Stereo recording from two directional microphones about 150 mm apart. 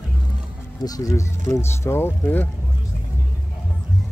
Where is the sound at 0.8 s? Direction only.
25° left (ahead or behind).